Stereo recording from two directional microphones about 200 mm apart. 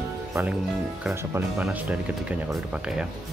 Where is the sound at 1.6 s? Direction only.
5° right (ahead or behind).